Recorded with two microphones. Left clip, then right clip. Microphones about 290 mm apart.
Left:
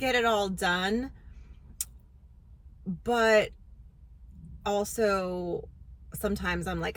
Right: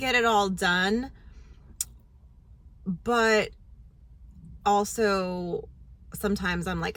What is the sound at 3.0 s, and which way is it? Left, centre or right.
Speech, centre.